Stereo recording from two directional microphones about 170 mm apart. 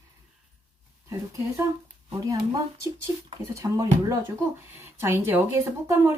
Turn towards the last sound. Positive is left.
turn(degrees=-15)  # may be behind; listen again after turning